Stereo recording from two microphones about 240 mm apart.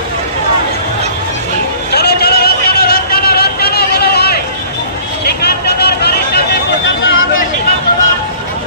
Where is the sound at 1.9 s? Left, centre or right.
Left.